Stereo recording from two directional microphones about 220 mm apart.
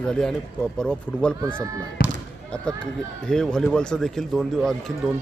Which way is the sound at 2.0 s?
45° left (ahead or behind).